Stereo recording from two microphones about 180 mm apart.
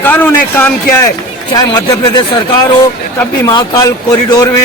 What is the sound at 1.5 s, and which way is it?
Speech, 20° left (ahead or behind).